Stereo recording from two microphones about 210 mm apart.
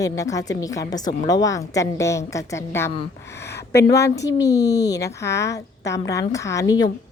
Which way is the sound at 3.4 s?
50° left (ahead or behind).